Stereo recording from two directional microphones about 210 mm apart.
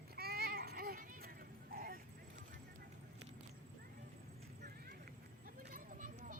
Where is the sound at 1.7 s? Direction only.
45° right (ahead or behind).